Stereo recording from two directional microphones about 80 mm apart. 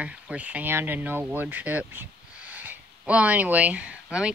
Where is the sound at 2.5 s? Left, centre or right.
Right.